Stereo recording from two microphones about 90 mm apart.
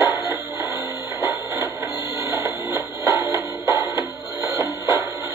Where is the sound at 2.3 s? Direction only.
35° right (ahead or behind).